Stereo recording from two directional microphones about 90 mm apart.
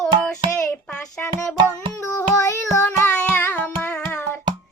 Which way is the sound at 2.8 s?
15° left (ahead or behind).